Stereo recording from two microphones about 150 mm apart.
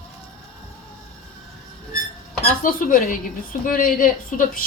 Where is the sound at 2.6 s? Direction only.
65° left (ahead or behind).